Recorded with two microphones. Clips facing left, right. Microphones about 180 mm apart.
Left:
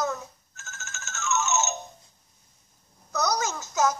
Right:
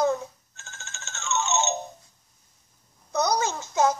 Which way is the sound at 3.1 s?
30° right (ahead or behind).